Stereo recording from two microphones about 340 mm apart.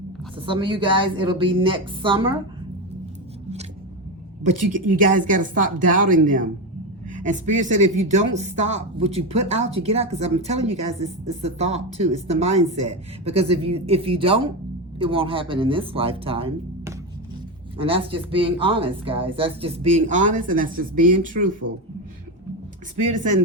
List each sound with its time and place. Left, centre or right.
0.3 s speech: centre
4.9 s speech: right